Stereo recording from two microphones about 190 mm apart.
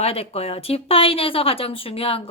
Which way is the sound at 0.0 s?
30° left (ahead or behind).